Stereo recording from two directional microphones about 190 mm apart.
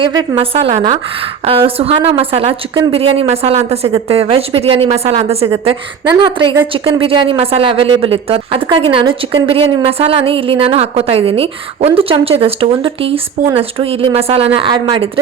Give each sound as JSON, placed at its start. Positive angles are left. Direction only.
{"t": 0.0, "sound": "a woman's voice", "side_deg": -25}